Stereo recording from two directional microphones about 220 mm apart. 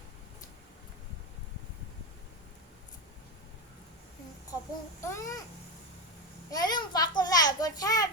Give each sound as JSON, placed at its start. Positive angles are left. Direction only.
{"t": 4.9, "sound": "a child's voice", "side_deg": 15}
{"t": 6.5, "sound": "a child's voice", "side_deg": 20}